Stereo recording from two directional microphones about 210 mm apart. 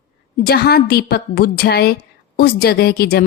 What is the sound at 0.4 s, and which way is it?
A woman's voice, 50° left (ahead or behind).